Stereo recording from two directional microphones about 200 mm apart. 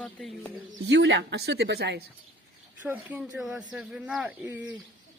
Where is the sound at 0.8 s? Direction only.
60° right (ahead or behind).